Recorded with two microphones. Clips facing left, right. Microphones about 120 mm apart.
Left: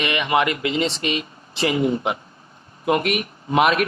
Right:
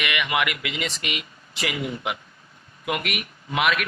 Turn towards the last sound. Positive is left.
turn(degrees=35)  # may be behind; listen again after turning